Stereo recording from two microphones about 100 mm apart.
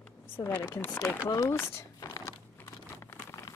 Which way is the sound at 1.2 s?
30° left (ahead or behind).